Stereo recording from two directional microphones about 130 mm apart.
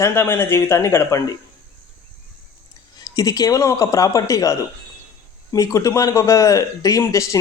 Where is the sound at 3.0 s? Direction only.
30° left (ahead or behind).